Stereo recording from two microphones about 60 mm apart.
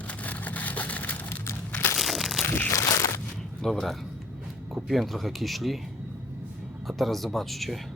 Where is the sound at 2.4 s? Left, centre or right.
Left.